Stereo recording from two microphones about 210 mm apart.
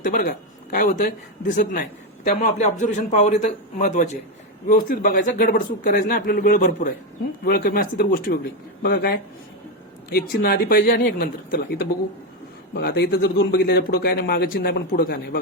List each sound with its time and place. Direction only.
0.0 s speech: 40° left (ahead or behind)